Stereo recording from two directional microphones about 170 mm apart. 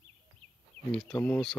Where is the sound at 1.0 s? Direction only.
10° left (ahead or behind).